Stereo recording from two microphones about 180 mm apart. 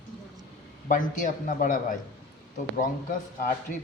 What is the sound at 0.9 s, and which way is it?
A man's voice, 45° left (ahead or behind).